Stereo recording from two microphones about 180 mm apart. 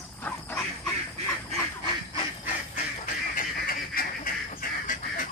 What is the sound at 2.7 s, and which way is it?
Duck, 50° left (ahead or behind).